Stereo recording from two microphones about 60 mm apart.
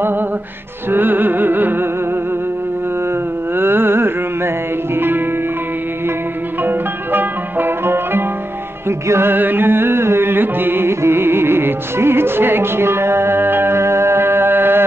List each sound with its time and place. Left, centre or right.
0.9 s music: right
3.5 s a sound: right
4.9 s music: right
6.6 s music: right
9.3 s carnatic music: right